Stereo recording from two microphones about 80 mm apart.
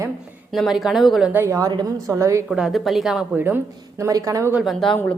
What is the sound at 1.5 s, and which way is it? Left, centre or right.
Speech, right.